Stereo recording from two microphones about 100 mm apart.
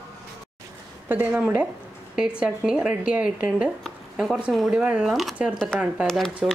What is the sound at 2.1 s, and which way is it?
A woman's voice, 10° right (ahead or behind).